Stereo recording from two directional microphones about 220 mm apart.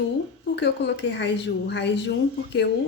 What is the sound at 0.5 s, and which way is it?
A woman's voice, 50° left (ahead or behind).